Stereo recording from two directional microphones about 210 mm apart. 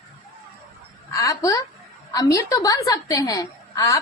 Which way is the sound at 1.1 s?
15° left (ahead or behind).